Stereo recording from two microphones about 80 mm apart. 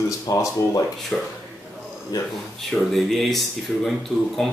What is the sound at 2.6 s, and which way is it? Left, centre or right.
Speech, centre.